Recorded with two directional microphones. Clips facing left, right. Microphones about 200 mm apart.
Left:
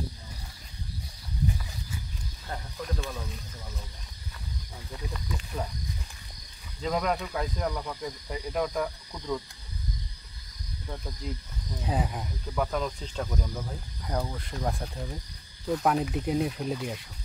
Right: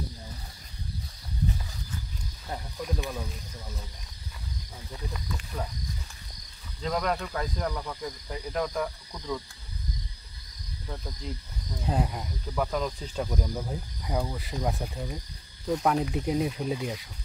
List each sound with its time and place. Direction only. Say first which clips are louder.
2.5 s speech: right 2 dB; 15° right (ahead or behind)
6.8 s speech: left 1 dB; 5° left (ahead or behind)
11.8 s speech: right 1 dB; centre (ahead or behind)